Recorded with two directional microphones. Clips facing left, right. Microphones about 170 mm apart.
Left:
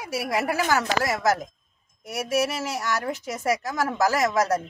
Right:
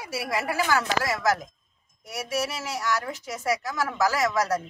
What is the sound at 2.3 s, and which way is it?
Speech, 50° left (ahead or behind).